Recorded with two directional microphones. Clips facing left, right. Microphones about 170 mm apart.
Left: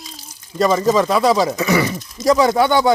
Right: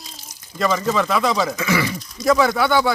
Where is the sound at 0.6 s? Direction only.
35° left (ahead or behind).